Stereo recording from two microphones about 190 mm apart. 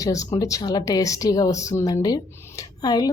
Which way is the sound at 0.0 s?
15° left (ahead or behind).